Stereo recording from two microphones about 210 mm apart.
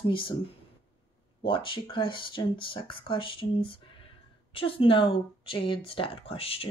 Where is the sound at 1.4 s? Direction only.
25° left (ahead or behind).